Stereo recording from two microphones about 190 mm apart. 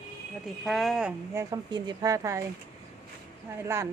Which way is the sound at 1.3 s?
15° right (ahead or behind).